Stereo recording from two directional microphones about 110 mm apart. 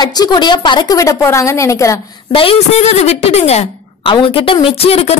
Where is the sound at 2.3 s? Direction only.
55° left (ahead or behind); by 3.7 s 75° left (ahead or behind).